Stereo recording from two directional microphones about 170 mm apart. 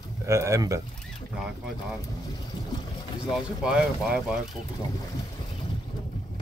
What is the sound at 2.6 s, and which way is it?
Boat, 25° left (ahead or behind).